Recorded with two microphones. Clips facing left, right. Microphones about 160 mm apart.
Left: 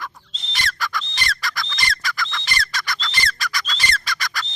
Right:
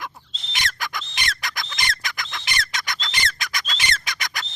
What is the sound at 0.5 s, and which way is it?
Bird, 20° right (ahead or behind).